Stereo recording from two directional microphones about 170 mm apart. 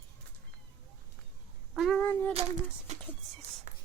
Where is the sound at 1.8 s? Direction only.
Centre (ahead or behind).